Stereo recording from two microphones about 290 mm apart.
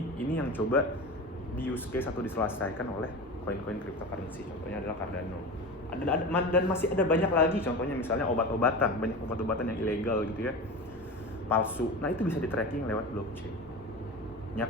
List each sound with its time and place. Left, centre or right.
0.3 s a man's voice: centre
6.1 s a man's voice: centre